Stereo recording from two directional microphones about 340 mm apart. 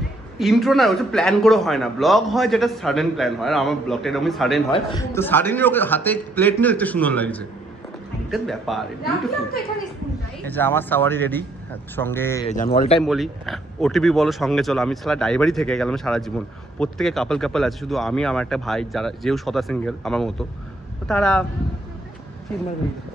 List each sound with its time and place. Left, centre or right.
0.4 s speech: centre
10.4 s speech: centre
12.4 s speech: left
13.0 s speech: centre